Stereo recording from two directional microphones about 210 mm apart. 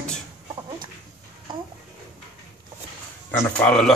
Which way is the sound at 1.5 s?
25° right (ahead or behind).